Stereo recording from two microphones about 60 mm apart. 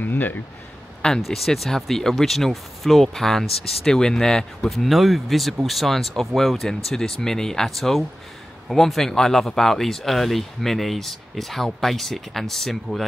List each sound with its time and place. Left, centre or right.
0.0 s speech: left
1.2 s speech: centre